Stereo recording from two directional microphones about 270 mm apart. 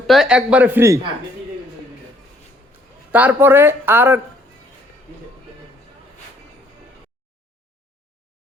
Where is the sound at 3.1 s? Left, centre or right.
Centre.